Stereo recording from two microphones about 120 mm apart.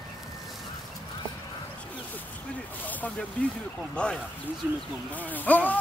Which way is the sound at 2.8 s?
15° left (ahead or behind).